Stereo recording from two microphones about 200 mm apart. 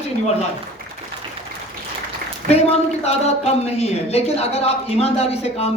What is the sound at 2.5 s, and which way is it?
A woman's voice, 30° left (ahead or behind).